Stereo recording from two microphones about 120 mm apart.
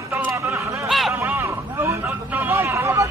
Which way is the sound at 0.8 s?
Centre (ahead or behind).